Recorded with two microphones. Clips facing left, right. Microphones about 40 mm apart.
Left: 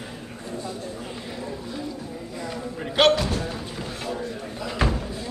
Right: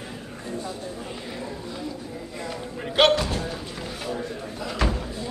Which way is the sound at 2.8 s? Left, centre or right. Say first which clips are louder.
Even; centre.